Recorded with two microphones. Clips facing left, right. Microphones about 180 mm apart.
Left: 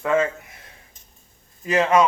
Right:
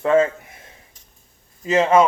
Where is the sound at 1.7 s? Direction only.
25° right (ahead or behind).